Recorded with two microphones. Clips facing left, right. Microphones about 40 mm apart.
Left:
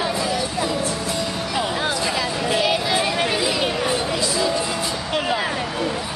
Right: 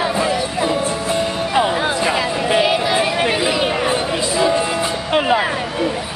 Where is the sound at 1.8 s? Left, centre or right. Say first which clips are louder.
Right 5 dB; right.